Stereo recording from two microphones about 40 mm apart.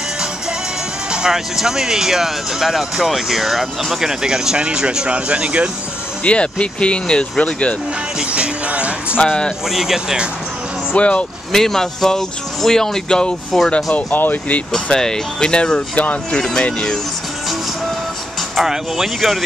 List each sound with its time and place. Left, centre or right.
1.1 s speech: centre; by 5.7 s right
6.2 s speech: left
8.3 s music: right
9.2 s speech: left
9.7 s speech: centre
11.0 s speech: left
11.5 s speech: centre
14.1 s speech: left
14.7 s speech: centre
16.0 s speech: left
16.3 s speech: centre
18.6 s speech: centre